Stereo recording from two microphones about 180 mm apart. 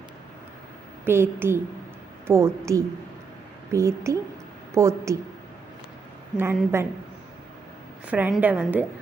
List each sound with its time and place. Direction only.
1.0 s a woman's voice: 15° right (ahead or behind)
6.3 s a woman's voice: 10° right (ahead or behind)
8.1 s a woman's voice: 10° right (ahead or behind)